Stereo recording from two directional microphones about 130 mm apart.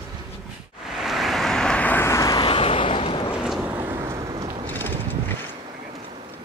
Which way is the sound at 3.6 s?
15° right (ahead or behind).